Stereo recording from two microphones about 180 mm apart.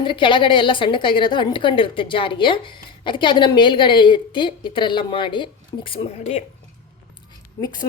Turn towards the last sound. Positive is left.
turn(degrees=20)  # may be behind; listen again after turning